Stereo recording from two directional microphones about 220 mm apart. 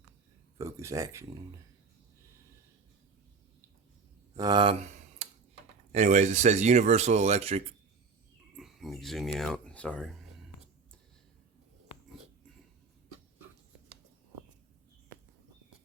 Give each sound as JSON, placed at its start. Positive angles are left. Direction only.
{"t": 0.6, "sound": "speech", "side_deg": -15}
{"t": 4.4, "sound": "speech", "side_deg": -20}
{"t": 5.9, "sound": "speech", "side_deg": -30}
{"t": 8.5, "sound": "a sound", "side_deg": 0}